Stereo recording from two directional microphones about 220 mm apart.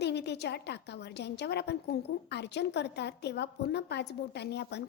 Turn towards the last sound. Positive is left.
turn(degrees=50)  # may be behind; listen again after turning